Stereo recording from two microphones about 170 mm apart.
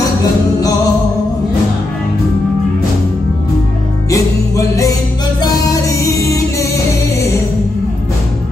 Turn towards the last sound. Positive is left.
turn(degrees=20)  # may be behind; listen again after turning